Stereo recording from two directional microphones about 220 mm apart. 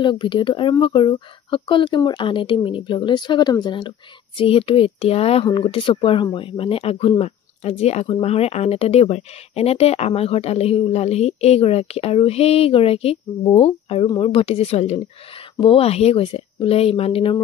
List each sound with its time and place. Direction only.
0.0 s speech: 20° left (ahead or behind)